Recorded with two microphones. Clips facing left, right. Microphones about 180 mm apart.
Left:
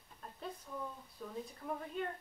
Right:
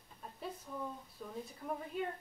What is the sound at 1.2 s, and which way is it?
Speech, 5° right (ahead or behind).